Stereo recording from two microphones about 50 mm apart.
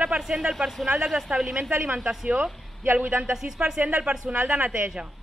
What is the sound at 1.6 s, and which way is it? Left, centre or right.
A man's voice, right.